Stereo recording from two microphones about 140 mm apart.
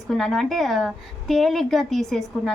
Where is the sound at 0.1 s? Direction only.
Centre (ahead or behind).